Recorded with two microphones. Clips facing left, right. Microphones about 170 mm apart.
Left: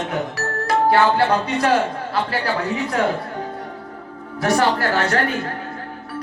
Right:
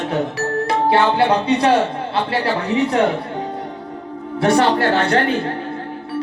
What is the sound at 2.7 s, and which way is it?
Speech, 75° right (ahead or behind).